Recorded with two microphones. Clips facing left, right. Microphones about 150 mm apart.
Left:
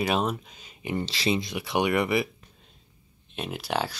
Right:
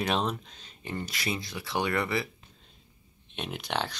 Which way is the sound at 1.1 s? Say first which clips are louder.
Left 7 dB; 25° left (ahead or behind).